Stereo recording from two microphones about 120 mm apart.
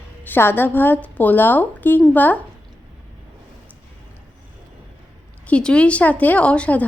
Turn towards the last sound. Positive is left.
turn(degrees=10)  # may be behind; listen again after turning